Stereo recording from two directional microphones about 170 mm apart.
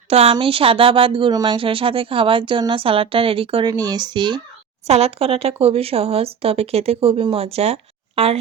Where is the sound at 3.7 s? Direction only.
20° right (ahead or behind).